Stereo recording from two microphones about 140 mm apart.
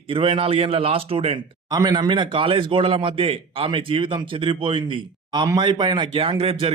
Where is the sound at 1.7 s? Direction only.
30° right (ahead or behind).